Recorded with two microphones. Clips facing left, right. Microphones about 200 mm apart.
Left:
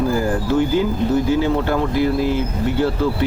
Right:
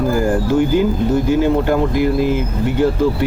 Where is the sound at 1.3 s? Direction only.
15° right (ahead or behind).